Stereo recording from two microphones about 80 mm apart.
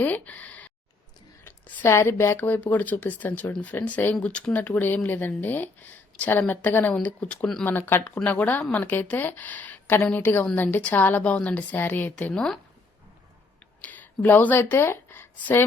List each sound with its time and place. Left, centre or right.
0.0 s speech: centre
1.5 s speech: left
12.3 s speech: centre
13.8 s speech: left
14.6 s speech: left